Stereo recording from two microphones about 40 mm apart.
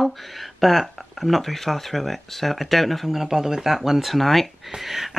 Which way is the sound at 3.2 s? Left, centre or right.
Centre.